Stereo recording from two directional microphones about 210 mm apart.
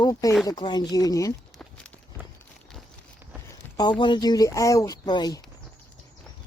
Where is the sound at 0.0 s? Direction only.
15° left (ahead or behind).